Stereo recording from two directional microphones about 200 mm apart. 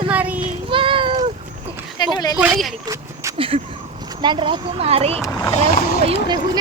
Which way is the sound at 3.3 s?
25° right (ahead or behind).